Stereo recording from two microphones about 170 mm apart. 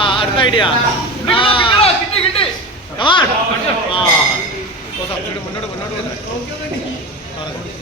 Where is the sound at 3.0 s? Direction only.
30° left (ahead or behind).